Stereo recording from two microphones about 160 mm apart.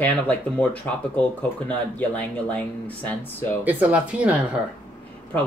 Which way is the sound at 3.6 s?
10° right (ahead or behind).